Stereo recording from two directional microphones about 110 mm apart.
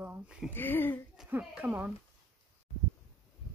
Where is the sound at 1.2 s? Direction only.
15° right (ahead or behind).